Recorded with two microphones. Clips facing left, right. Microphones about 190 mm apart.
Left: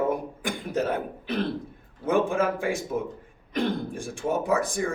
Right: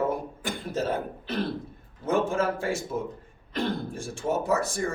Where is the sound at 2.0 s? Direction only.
15° left (ahead or behind).